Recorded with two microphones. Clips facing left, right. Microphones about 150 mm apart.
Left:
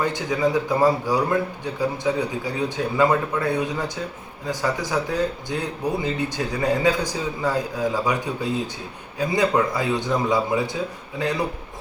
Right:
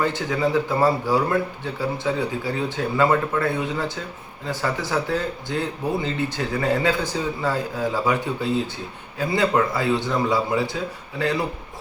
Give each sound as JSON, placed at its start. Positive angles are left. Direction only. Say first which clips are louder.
{"t": 0.0, "sound": "a man's voice", "louder": "even", "side_deg": 15}